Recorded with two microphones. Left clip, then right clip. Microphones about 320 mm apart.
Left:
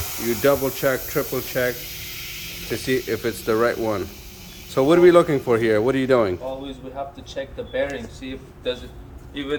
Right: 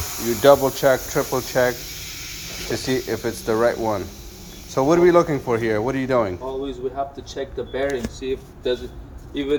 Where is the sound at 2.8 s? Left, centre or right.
Centre.